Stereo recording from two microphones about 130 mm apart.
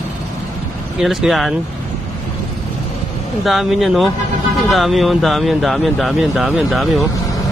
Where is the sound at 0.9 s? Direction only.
Centre (ahead or behind).